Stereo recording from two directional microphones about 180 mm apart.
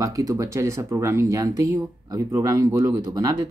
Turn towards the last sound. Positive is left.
turn(degrees=-20)  # may be behind; listen again after turning